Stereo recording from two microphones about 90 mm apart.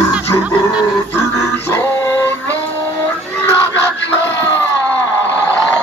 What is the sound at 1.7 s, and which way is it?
Music, 25° left (ahead or behind).